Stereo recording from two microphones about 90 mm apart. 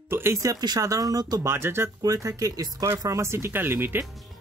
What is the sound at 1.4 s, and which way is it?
Speech, 30° right (ahead or behind).